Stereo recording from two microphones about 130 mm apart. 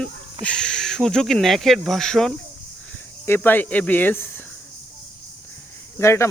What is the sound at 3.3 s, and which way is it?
Speech, 15° left (ahead or behind).